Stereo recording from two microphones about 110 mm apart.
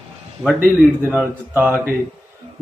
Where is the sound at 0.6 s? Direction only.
15° right (ahead or behind).